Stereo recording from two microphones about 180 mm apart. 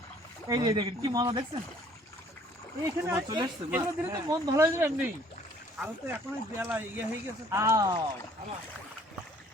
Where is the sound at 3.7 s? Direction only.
20° right (ahead or behind).